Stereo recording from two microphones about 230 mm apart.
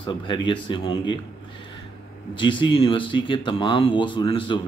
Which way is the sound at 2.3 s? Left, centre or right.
Left.